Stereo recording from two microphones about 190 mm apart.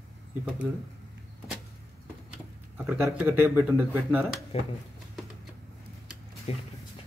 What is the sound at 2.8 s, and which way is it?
Speech, 10° right (ahead or behind).